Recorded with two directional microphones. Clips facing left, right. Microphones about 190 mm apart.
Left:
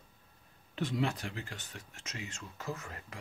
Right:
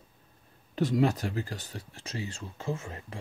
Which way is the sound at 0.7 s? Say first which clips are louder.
Right 8 dB; 40° right (ahead or behind).